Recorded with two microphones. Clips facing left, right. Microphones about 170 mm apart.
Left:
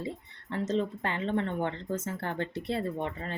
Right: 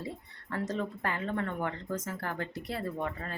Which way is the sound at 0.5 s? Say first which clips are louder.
Left 4 dB; 20° left (ahead or behind).